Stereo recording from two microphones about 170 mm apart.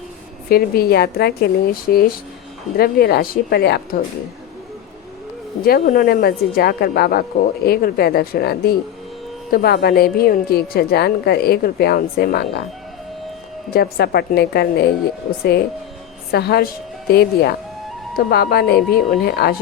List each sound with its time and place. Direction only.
0.4 s speech: 60° left (ahead or behind)
5.6 s speech: 60° left (ahead or behind)
13.7 s speech: 65° left (ahead or behind)
16.3 s a woman's voice: 70° left (ahead or behind)